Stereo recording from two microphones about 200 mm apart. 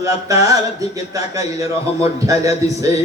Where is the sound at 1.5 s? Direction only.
15° right (ahead or behind).